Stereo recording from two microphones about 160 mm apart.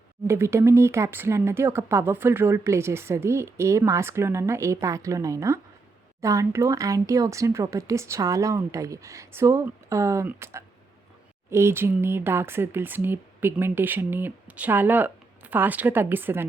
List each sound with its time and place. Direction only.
0.3 s speech: 15° right (ahead or behind)